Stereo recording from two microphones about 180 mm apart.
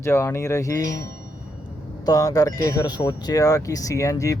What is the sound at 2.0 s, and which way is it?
Speech, 20° left (ahead or behind).